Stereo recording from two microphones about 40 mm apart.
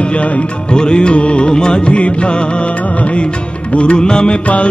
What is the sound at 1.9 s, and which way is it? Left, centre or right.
Music, left.